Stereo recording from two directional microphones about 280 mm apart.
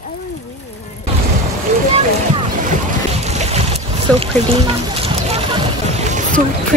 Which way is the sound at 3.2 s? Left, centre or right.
Right.